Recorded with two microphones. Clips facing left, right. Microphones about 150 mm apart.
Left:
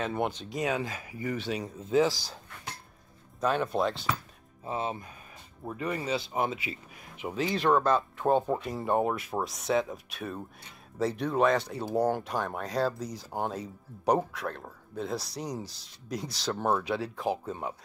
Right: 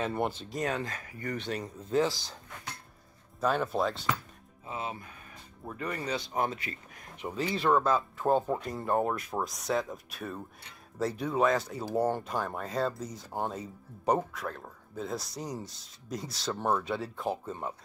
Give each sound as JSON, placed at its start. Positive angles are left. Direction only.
{"t": 0.0, "sound": "speech", "side_deg": 0}
{"t": 3.3, "sound": "speech", "side_deg": 0}
{"t": 4.6, "sound": "speech", "side_deg": 30}
{"t": 5.7, "sound": "speech", "side_deg": 10}